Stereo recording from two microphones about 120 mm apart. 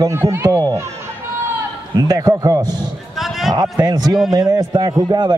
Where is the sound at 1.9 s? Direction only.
30° right (ahead or behind).